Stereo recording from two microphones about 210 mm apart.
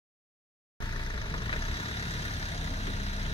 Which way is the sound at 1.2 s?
25° left (ahead or behind).